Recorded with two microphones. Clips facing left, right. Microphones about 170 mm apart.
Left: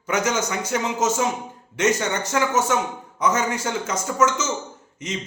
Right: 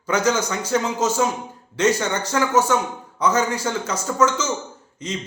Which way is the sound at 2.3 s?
20° left (ahead or behind).